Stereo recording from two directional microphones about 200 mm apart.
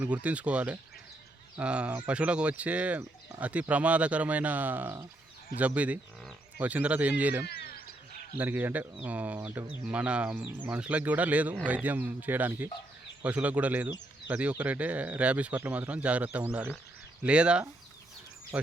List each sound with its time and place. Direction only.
0.0 s speech: 5° right (ahead or behind)
7.4 s a sound: 50° left (ahead or behind)
8.4 s speech: 10° right (ahead or behind)